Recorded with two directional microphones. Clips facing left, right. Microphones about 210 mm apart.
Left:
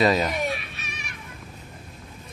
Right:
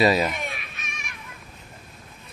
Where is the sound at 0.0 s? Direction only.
5° right (ahead or behind).